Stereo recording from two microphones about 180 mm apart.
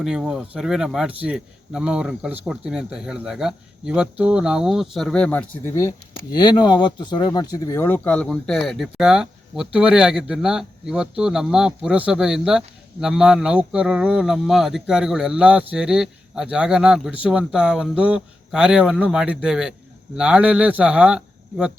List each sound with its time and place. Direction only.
0.0 s a man's voice: 5° right (ahead or behind); by 5.9 s 15° left (ahead or behind)
6.3 s a man's voice: 25° left (ahead or behind); by 21.7 s 5° right (ahead or behind)